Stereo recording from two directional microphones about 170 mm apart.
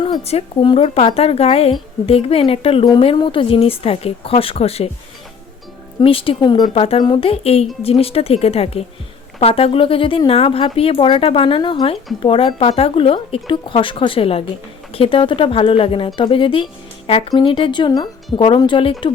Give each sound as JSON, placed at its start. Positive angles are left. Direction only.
{"t": 0.0, "sound": "speech", "side_deg": 35}
{"t": 6.0, "sound": "speech", "side_deg": 30}